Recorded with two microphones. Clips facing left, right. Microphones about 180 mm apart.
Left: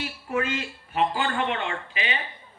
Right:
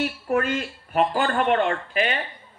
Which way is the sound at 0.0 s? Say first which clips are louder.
Right 5 dB; 50° right (ahead or behind).